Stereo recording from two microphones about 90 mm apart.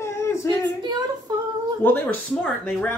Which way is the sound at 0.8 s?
50° right (ahead or behind).